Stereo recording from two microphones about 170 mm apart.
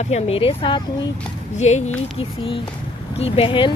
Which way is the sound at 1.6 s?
40° left (ahead or behind).